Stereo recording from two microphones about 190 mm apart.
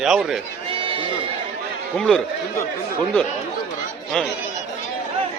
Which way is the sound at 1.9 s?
5° left (ahead or behind).